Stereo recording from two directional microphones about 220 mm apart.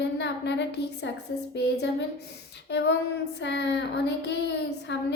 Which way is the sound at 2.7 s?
50° left (ahead or behind).